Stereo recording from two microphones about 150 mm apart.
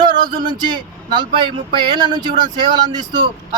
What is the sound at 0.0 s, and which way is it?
Speech, 30° right (ahead or behind).